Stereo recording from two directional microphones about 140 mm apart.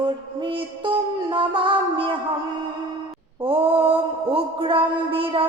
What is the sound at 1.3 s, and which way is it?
Music, 35° right (ahead or behind).